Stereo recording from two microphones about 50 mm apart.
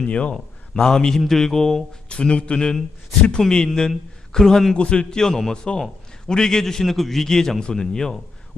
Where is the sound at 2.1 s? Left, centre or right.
Left.